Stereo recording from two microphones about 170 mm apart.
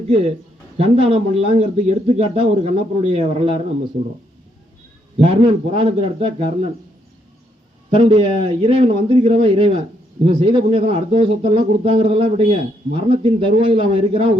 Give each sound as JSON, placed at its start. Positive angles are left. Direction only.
{"t": 0.8, "sound": "speech", "side_deg": -30}
{"t": 5.1, "sound": "speech", "side_deg": -35}
{"t": 7.9, "sound": "a man's voice", "side_deg": -30}